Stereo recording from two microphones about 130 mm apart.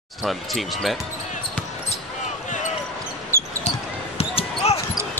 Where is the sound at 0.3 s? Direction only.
Centre (ahead or behind).